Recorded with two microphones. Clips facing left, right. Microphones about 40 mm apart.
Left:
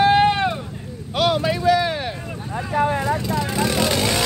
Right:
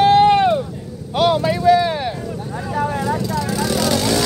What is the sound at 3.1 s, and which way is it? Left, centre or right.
Vehicle, left.